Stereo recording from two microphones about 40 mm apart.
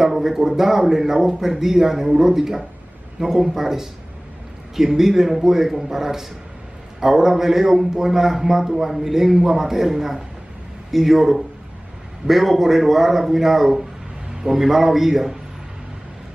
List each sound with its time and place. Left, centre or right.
0.0 s a man's voice: centre